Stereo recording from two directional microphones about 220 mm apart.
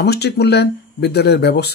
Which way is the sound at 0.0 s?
50° left (ahead or behind).